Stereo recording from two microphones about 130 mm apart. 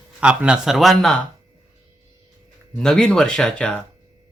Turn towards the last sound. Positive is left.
turn(degrees=5)  # may be behind; listen again after turning